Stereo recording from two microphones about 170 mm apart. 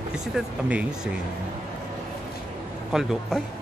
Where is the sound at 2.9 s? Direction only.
5° right (ahead or behind).